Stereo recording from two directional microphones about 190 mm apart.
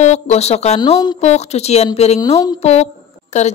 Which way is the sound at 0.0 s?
35° left (ahead or behind).